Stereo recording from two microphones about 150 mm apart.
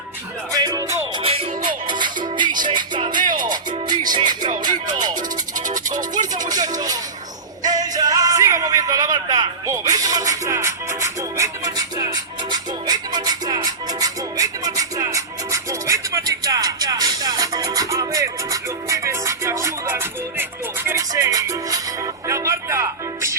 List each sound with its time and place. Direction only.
0.5 s music: 25° right (ahead or behind)
1.2 s music: 40° right (ahead or behind)
3.2 s music: 65° right (ahead or behind)
3.5 s music: 30° right (ahead or behind)
5.5 s music: 60° right (ahead or behind)
6.5 s music: 25° right (ahead or behind)